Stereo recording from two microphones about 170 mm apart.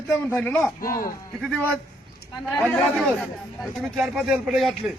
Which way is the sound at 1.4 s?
10° left (ahead or behind).